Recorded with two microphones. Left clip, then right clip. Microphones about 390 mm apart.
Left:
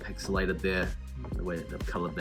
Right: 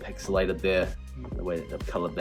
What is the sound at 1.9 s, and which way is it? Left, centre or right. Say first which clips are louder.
Speech: right 4 dB; right.